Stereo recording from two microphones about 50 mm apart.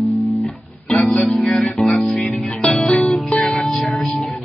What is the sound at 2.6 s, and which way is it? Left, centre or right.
Music, left.